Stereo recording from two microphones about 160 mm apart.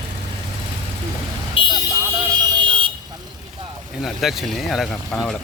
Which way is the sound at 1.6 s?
35° left (ahead or behind).